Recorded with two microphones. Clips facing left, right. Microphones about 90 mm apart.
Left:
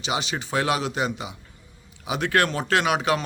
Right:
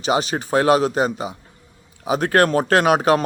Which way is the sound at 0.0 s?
45° right (ahead or behind).